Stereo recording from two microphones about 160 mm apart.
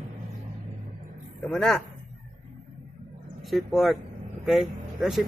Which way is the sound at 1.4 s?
5° left (ahead or behind).